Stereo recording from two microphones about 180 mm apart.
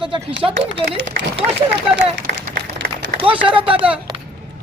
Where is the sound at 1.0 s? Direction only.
75° right (ahead or behind).